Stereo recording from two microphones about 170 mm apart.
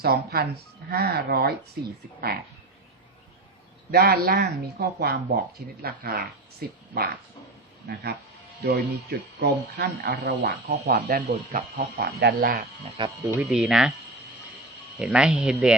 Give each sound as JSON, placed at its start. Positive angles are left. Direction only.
{"t": 0.0, "sound": "speech", "side_deg": -70}
{"t": 3.9, "sound": "speech", "side_deg": -65}
{"t": 12.0, "sound": "speech", "side_deg": -65}
{"t": 13.0, "sound": "speech", "side_deg": -20}
{"t": 13.4, "sound": "speech", "side_deg": -5}
{"t": 14.9, "sound": "speech", "side_deg": -5}